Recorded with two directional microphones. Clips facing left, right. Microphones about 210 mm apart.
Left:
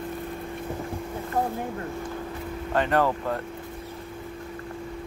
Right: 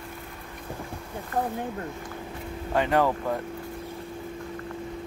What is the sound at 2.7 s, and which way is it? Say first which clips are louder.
Speech: even; 10° right (ahead or behind).